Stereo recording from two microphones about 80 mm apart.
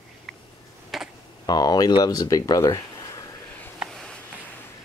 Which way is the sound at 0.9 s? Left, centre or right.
Centre.